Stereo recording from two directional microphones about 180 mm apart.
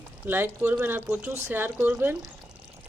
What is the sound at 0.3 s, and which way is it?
Speech, 10° right (ahead or behind).